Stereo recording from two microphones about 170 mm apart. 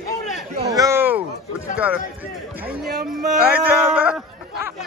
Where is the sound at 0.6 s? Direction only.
20° right (ahead or behind).